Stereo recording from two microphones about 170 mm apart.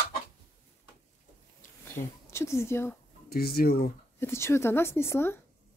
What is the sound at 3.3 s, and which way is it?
Speech, 65° left (ahead or behind).